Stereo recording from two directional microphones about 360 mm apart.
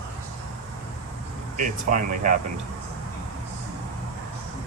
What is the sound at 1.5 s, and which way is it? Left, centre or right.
Speech, right.